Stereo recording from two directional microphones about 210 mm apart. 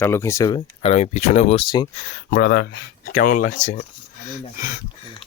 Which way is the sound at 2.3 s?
50° left (ahead or behind).